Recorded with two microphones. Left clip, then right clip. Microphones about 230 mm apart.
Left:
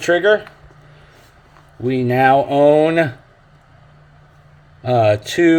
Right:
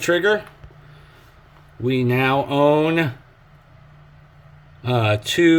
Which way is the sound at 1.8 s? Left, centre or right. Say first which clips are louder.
Left 6 dB; centre.